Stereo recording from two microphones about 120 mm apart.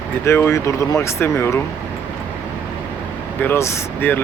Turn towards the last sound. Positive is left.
turn(degrees=15)  # may be behind; listen again after turning